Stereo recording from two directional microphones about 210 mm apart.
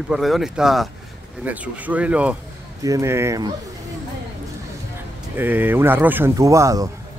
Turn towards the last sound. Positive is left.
turn(degrees=-15)  # may be behind; listen again after turning